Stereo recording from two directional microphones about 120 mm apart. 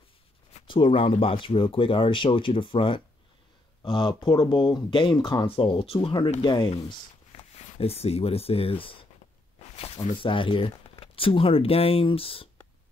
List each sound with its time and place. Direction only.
0.7 s speech: 40° left (ahead or behind)
7.3 s speech: 60° left (ahead or behind)
9.8 s a sound: 55° left (ahead or behind)
10.1 s speech: 45° left (ahead or behind)